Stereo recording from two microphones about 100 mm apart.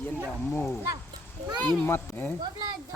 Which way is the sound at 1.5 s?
50° right (ahead or behind).